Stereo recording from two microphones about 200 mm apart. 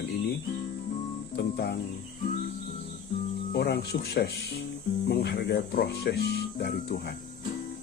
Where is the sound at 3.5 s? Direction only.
50° left (ahead or behind).